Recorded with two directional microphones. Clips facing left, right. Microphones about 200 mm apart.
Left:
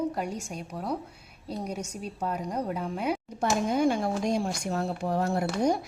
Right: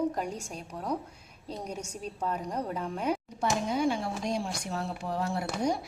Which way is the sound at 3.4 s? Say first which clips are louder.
Left 5 dB; 45° left (ahead or behind).